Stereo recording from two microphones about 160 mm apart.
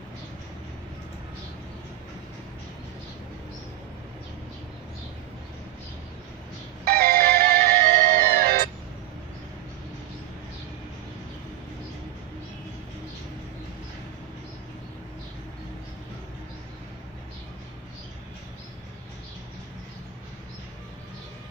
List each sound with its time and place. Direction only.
6.8 s music: 65° right (ahead or behind)